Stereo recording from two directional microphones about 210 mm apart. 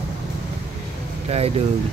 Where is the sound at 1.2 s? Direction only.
30° right (ahead or behind).